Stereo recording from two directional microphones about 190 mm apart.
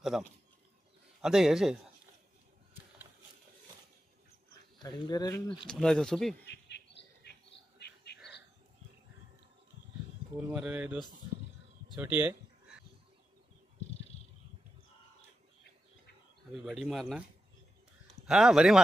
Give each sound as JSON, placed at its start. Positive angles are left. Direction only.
{"t": 0.1, "sound": "speech", "side_deg": -5}
{"t": 4.8, "sound": "speech", "side_deg": 20}
{"t": 5.6, "sound": "speech", "side_deg": 0}
{"t": 6.4, "sound": "bird", "side_deg": 60}
{"t": 7.8, "sound": "whispering", "side_deg": 60}
{"t": 10.5, "sound": "speech", "side_deg": -5}
{"t": 12.0, "sound": "a sound", "side_deg": -10}
{"t": 16.5, "sound": "speech", "side_deg": 0}
{"t": 18.2, "sound": "speech", "side_deg": 0}